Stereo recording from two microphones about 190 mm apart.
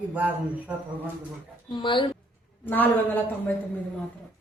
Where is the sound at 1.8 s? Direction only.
25° left (ahead or behind).